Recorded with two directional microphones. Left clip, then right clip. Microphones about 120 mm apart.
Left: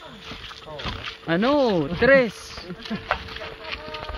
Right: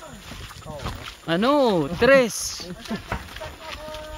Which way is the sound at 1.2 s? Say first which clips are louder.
Right 1 dB; 45° right (ahead or behind).